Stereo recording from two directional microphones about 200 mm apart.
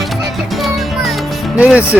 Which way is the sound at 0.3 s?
Centre (ahead or behind).